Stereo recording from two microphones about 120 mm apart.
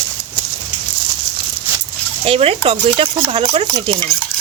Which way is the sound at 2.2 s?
55° right (ahead or behind).